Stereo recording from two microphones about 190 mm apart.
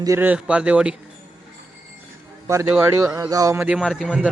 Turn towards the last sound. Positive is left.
turn(degrees=0)  # may be behind; listen again after turning